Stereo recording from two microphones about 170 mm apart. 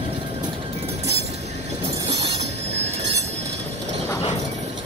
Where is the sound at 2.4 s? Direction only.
40° right (ahead or behind).